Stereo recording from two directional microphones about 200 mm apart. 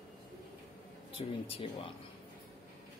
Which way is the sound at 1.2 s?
30° left (ahead or behind).